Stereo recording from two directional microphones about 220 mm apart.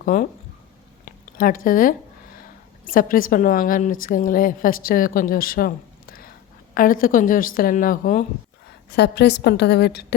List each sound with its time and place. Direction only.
0.0 s speech: 40° left (ahead or behind)
1.0 s a sound: 40° left (ahead or behind)
2.8 s a woman's voice: 40° left (ahead or behind)
8.9 s a woman's voice: 50° left (ahead or behind)